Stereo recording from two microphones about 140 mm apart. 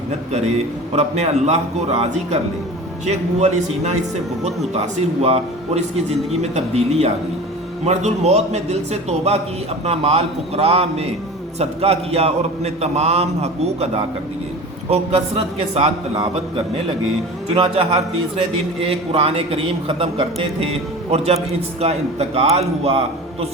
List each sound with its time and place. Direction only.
0.3 s a man's voice: 50° right (ahead or behind)